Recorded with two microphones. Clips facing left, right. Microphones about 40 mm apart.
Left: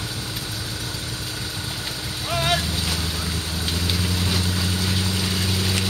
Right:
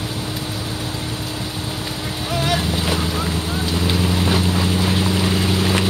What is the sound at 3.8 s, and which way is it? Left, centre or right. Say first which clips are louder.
Vehicle: right 7 dB; right.